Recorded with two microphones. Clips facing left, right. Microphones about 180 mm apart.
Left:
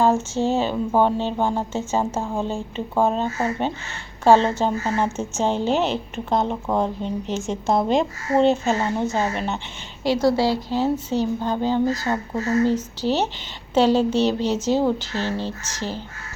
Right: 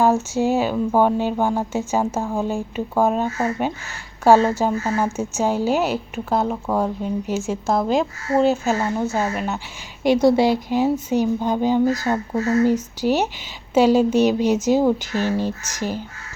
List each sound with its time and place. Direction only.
0.0 s a woman's voice: 10° right (ahead or behind)
10.0 s a woman's voice: 15° right (ahead or behind)